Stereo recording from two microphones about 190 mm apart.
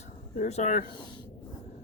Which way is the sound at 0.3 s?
35° left (ahead or behind).